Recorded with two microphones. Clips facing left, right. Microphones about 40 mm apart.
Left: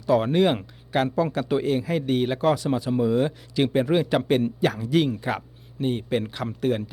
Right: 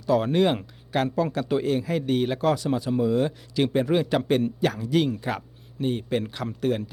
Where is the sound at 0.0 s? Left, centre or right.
Centre.